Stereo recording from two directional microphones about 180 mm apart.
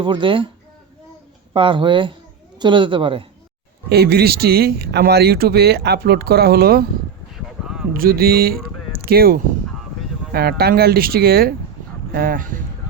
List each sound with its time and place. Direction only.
0.0 s a man's voice: 25° right (ahead or behind)
1.5 s a man's voice: 30° right (ahead or behind)
3.8 s speech: 65° right (ahead or behind)
7.3 s a sound: centre (ahead or behind)
7.9 s speech: 55° right (ahead or behind)
8.9 s a sound: 55° right (ahead or behind)
10.3 s speech: 60° right (ahead or behind)